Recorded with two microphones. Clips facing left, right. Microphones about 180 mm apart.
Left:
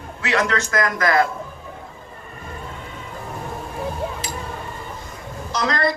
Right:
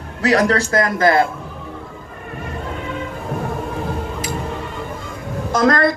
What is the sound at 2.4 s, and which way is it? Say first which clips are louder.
Music: right 7 dB; 75° right (ahead or behind).